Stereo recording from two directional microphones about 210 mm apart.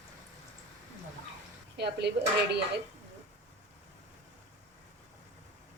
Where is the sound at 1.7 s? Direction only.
50° right (ahead or behind).